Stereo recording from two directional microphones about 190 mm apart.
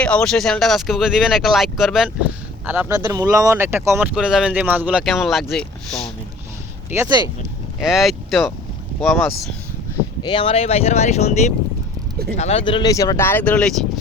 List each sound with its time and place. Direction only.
0.0 s speech: 5° left (ahead or behind)
2.6 s speech: 15° right (ahead or behind); by 6.1 s 5° left (ahead or behind)
6.9 s speech: 20° right (ahead or behind)
7.8 s speech: centre (ahead or behind)
10.2 s speech: 25° left (ahead or behind); by 14.0 s 5° left (ahead or behind)